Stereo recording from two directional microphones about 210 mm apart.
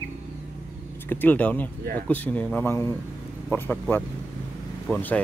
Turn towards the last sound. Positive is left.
turn(degrees=5)  # may be behind; listen again after turning